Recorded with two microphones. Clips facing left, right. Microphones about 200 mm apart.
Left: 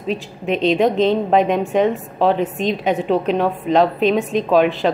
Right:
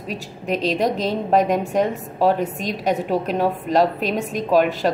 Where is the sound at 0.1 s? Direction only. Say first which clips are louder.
Left 4 dB; 40° right (ahead or behind).